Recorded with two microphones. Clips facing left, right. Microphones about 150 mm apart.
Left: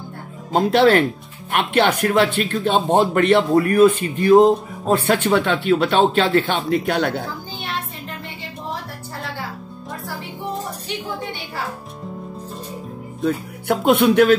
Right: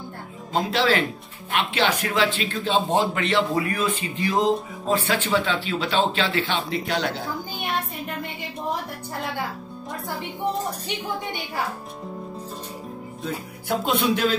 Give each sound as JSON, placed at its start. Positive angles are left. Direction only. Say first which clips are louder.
{"t": 0.5, "sound": "a man's voice", "louder": "left 7 dB", "side_deg": 50}
{"t": 13.7, "sound": "a man's voice", "louder": "left 7 dB", "side_deg": 60}